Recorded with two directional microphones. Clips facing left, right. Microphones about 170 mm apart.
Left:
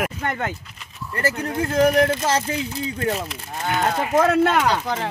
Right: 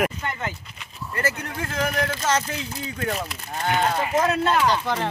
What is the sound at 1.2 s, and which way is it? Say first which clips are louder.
Speech: left 5 dB; 30° left (ahead or behind).